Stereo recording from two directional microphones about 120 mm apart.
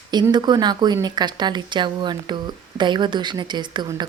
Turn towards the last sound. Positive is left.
turn(degrees=-40)  # may be behind; listen again after turning